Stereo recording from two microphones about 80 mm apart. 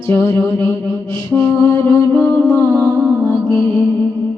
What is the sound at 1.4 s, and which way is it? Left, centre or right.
Mantra, left.